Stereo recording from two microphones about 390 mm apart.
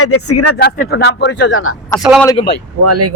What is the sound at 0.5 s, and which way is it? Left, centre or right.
Speech, left.